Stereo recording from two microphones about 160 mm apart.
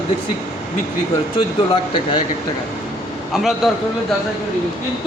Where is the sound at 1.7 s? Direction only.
30° left (ahead or behind).